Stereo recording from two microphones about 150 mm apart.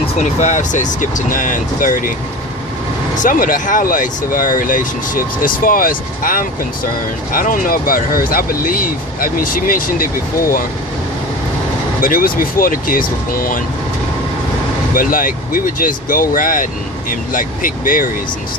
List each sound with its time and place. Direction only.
0.2 s speech: 50° left (ahead or behind)
3.2 s speech: 60° left (ahead or behind)
11.9 s speech: 70° left (ahead or behind)
14.9 s speech: 70° left (ahead or behind)